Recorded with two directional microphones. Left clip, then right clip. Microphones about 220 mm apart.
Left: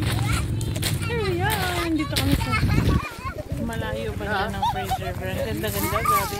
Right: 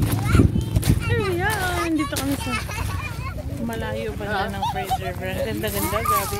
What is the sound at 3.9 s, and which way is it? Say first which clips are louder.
Speech: even; 30° right (ahead or behind).